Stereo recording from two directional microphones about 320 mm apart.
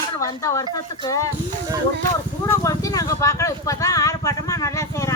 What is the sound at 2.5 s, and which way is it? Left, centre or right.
Speech, centre.